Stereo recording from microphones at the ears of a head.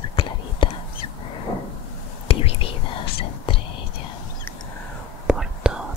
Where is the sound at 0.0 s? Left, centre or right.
Left.